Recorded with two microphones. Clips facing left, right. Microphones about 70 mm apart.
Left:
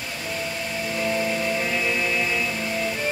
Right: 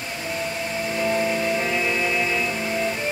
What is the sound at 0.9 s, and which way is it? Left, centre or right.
Music, centre.